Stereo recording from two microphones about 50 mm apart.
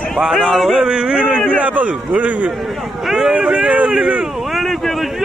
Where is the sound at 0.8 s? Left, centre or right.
Centre.